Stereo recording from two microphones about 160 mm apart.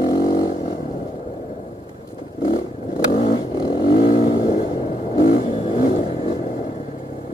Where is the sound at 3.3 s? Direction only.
30° left (ahead or behind).